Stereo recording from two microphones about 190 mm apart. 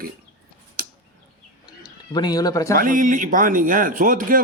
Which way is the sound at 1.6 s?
20° left (ahead or behind).